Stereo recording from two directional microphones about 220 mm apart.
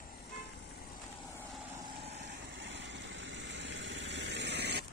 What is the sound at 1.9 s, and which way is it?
Vehicle, 30° right (ahead or behind).